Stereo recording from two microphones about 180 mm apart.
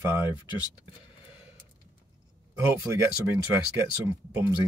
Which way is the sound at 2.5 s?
15° right (ahead or behind).